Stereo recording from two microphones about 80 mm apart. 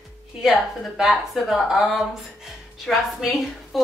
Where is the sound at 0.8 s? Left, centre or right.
Centre.